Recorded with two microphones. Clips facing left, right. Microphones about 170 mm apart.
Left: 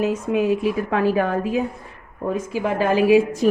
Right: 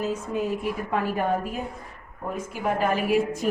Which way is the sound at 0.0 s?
75° left (ahead or behind).